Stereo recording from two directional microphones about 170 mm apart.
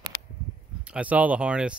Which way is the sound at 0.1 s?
20° left (ahead or behind).